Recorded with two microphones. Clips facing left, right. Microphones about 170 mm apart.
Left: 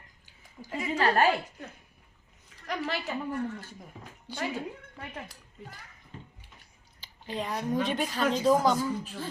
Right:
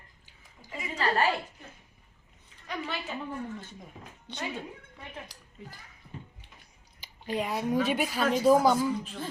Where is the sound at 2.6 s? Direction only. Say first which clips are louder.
Left 3 dB; 85° left.